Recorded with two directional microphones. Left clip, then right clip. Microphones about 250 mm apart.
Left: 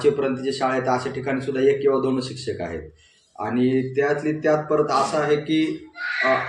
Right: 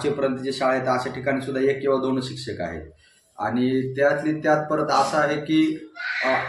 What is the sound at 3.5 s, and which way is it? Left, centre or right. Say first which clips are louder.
Speech: left 3 dB; centre.